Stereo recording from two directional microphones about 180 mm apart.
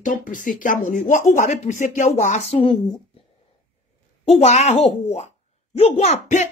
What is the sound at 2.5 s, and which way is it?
Speech, 30° left (ahead or behind).